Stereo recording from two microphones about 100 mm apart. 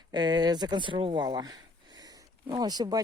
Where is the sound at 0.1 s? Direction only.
45° right (ahead or behind).